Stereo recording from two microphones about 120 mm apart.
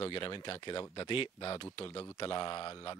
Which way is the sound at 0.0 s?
45° left (ahead or behind).